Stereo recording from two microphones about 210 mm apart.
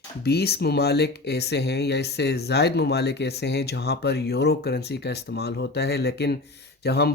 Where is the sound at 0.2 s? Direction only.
50° left (ahead or behind).